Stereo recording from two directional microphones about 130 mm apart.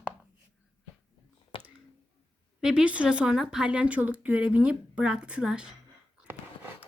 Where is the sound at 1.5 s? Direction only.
45° left (ahead or behind).